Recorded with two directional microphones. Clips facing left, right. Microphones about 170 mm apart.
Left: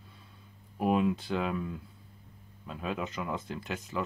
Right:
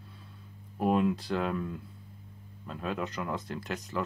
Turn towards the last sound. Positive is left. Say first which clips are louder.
# right 1 dB
turn(degrees=0)  # may be behind; listen again after turning